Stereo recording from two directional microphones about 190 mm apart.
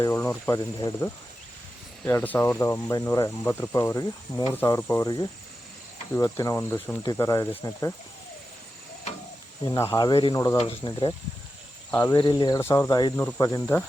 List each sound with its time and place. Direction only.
0.0 s speech: 15° left (ahead or behind)
6.1 s speech: 15° left (ahead or behind)
9.7 s speech: 15° left (ahead or behind)
11.9 s speech: 10° left (ahead or behind)
12.1 s speech: 25° left (ahead or behind)